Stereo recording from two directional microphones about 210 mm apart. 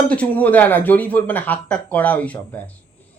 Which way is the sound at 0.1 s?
5° left (ahead or behind).